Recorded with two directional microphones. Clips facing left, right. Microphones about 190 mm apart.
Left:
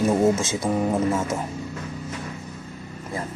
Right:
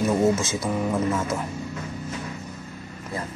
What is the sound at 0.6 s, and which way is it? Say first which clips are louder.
Speech: left 2 dB; 30° left (ahead or behind).